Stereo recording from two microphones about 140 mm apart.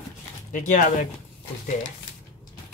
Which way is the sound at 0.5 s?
65° left (ahead or behind).